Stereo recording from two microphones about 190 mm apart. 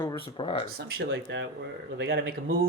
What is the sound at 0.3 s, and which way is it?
Speech, 25° left (ahead or behind).